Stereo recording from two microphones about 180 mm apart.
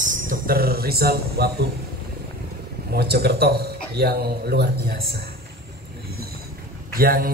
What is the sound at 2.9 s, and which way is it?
A man's voice, 60° right (ahead or behind).